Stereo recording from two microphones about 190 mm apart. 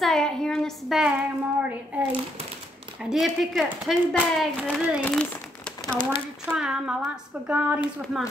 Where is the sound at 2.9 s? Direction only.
5° right (ahead or behind).